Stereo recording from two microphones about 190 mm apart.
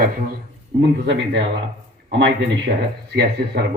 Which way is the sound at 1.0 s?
70° right (ahead or behind).